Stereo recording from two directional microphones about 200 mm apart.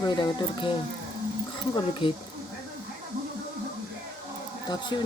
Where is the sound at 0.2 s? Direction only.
25° left (ahead or behind).